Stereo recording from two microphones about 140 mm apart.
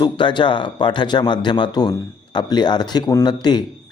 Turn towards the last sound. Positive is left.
turn(degrees=30)  # may be behind; listen again after turning